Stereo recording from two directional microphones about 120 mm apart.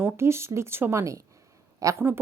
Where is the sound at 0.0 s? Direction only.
20° right (ahead or behind).